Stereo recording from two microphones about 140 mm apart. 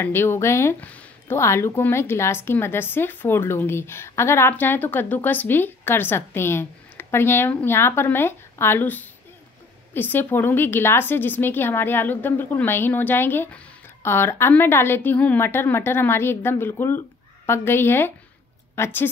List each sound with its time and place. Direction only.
0.0 s speech: 15° left (ahead or behind)